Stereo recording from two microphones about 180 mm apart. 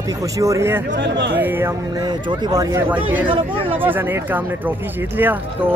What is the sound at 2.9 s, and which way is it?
Speech, 10° right (ahead or behind).